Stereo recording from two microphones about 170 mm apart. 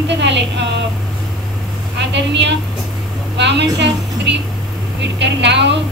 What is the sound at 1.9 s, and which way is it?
A woman's voice, 90° right.